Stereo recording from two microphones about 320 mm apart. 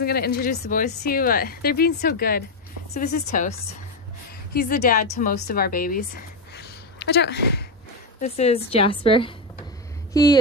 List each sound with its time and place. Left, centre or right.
0.0 s speech: left
4.6 s a woman's voice: left
8.2 s speech: centre